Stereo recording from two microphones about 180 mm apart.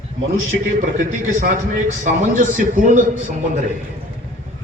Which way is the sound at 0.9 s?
50° right (ahead or behind).